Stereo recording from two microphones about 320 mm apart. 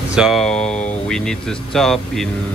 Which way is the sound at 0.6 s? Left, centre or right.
Left.